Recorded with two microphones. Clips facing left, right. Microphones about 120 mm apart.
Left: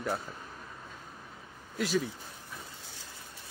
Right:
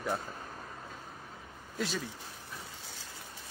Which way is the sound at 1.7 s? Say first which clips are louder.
Left 5 dB; 5° left (ahead or behind).